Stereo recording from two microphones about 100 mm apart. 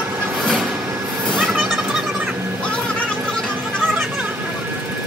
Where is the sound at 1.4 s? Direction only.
Centre (ahead or behind).